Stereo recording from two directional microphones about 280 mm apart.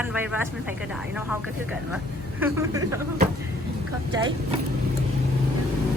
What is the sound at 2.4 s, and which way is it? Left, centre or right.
Speech, centre.